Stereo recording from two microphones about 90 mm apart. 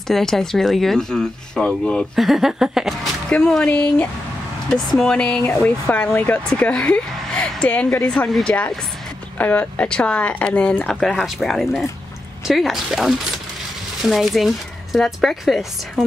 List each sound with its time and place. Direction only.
0.1 s speech: 5° left (ahead or behind)
2.1 s speech: centre (ahead or behind)
3.3 s speech: 10° left (ahead or behind)